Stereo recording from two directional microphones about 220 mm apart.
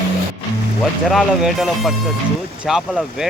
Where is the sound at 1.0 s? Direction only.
Centre (ahead or behind).